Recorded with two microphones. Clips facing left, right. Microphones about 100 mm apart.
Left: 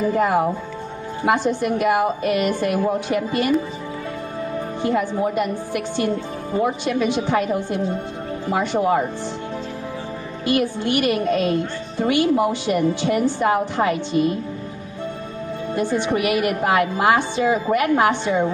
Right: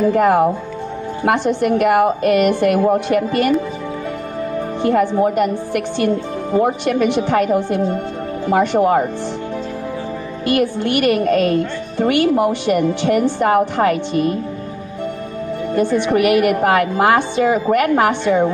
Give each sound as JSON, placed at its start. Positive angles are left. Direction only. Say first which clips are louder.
{"t": 0.1, "sound": "a woman's voice", "louder": "right 5 dB", "side_deg": -60}
{"t": 4.8, "sound": "a woman's voice", "louder": "right 6 dB", "side_deg": -55}
{"t": 10.4, "sound": "a woman's voice", "louder": "right 3 dB", "side_deg": -60}
{"t": 15.7, "sound": "a woman's voice", "louder": "right 5 dB", "side_deg": -60}